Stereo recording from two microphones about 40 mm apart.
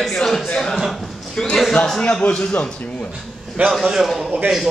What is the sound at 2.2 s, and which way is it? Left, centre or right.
Speech, left.